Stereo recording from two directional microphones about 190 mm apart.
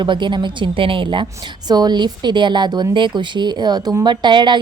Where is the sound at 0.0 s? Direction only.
25° right (ahead or behind).